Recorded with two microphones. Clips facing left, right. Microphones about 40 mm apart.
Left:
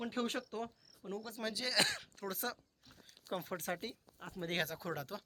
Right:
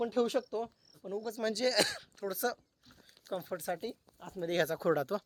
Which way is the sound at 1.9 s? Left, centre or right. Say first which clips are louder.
Right 2 dB; left.